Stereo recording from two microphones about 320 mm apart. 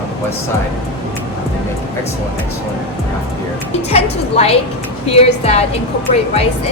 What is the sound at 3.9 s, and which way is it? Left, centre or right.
A woman's voice, centre.